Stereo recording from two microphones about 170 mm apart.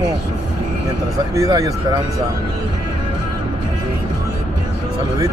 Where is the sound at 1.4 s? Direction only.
20° right (ahead or behind).